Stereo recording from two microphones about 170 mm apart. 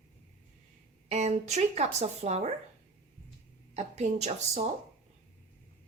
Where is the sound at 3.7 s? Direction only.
40° right (ahead or behind).